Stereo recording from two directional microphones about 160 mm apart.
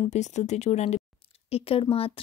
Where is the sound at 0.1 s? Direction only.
45° left (ahead or behind).